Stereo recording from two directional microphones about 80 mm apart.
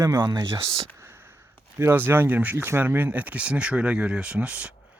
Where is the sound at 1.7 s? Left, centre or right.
Right.